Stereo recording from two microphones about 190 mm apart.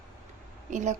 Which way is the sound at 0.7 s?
40° right (ahead or behind).